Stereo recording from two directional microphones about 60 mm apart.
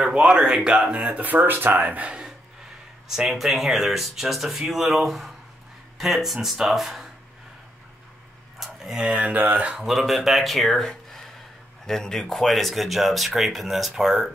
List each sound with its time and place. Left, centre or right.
0.0 s speech: centre
3.1 s speech: centre
8.5 s speech: centre
9.2 s speech: right
9.8 s speech: centre